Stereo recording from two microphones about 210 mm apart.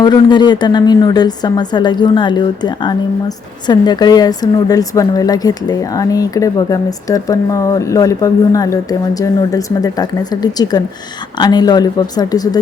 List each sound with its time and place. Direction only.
0.0 s a woman's voice: 20° left (ahead or behind)